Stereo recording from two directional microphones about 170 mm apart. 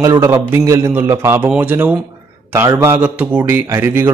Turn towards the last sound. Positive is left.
turn(degrees=-15)  # may be behind; listen again after turning